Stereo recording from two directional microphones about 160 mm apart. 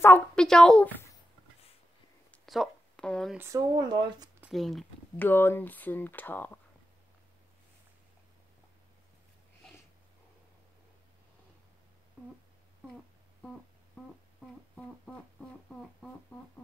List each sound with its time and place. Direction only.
0.0 s speech: 10° left (ahead or behind)
2.3 s a sound: centre (ahead or behind)
3.3 s speech: 20° right (ahead or behind)
4.5 s speech: centre (ahead or behind)
5.2 s speech: 15° left (ahead or behind)
15.8 s a sound: 5° left (ahead or behind)